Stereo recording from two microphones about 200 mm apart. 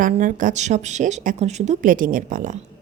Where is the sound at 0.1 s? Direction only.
40° right (ahead or behind).